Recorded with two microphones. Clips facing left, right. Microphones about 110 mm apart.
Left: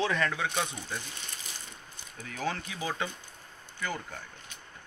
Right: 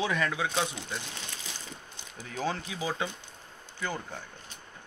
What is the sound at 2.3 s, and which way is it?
Speech, 15° right (ahead or behind).